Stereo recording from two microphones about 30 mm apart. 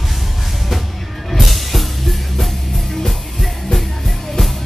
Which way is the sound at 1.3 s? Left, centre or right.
Centre.